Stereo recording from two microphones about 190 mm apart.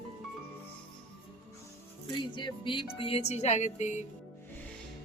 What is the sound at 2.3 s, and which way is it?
Speech, 25° left (ahead or behind).